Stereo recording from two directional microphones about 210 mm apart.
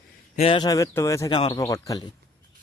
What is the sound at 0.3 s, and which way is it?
Speech, 25° left (ahead or behind).